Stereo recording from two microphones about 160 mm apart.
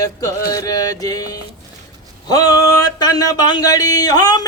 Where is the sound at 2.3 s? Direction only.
25° left (ahead or behind).